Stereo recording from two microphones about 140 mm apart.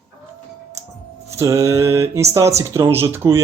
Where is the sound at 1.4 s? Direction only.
20° right (ahead or behind).